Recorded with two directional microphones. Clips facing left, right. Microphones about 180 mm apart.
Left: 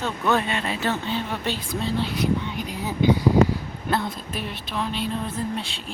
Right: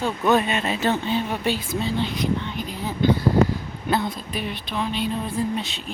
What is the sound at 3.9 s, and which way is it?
Speech, centre (ahead or behind).